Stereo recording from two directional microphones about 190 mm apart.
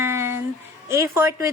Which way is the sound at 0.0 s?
15° right (ahead or behind).